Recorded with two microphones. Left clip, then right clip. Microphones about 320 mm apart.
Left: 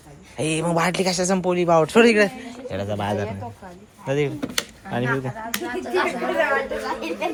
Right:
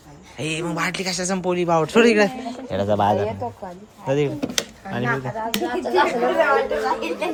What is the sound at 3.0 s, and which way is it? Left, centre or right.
Speech, centre.